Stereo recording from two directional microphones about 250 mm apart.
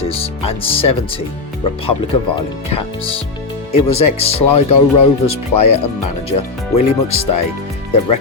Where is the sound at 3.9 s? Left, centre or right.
Left.